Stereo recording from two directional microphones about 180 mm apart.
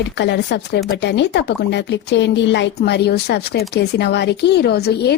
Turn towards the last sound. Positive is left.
turn(degrees=65)  # may be behind; listen again after turning